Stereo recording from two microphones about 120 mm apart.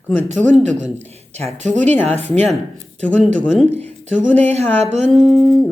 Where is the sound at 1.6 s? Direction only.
90° right.